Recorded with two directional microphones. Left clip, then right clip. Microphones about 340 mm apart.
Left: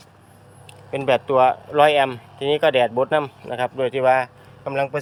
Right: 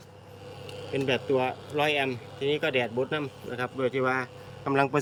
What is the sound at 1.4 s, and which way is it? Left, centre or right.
Speech, centre.